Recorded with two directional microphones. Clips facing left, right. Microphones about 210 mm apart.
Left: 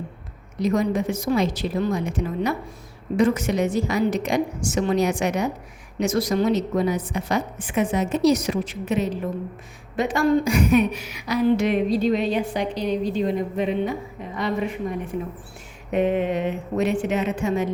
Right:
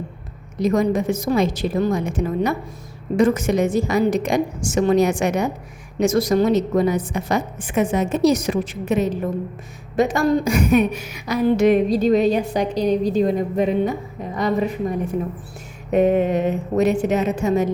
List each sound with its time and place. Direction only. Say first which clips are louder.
0.6 s a woman's voice: right 3 dB; 45° right (ahead or behind)